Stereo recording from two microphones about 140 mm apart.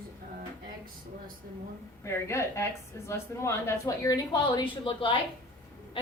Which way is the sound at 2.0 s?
20° left (ahead or behind).